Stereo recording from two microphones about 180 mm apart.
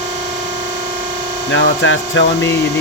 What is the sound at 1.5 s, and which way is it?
Speech, 90° left.